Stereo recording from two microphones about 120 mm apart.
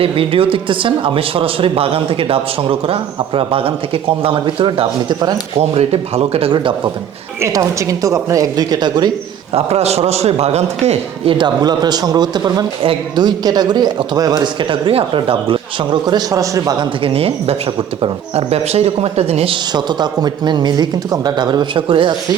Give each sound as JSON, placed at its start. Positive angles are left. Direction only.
{"t": 0.0, "sound": "speech", "side_deg": -50}
{"t": 5.5, "sound": "a man's voice", "side_deg": -60}
{"t": 7.4, "sound": "a woman's voice", "side_deg": -25}
{"t": 9.5, "sound": "a man's voice", "side_deg": -60}
{"t": 11.3, "sound": "a man's voice", "side_deg": -35}
{"t": 17.0, "sound": "a man's voice", "side_deg": -50}
{"t": 19.7, "sound": "a man's voice", "side_deg": -35}